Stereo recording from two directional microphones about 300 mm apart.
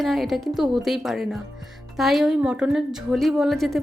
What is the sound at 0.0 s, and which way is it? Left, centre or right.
A woman's voice, centre.